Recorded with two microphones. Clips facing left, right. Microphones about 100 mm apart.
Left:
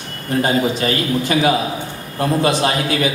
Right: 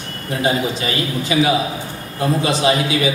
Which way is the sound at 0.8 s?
50° left (ahead or behind).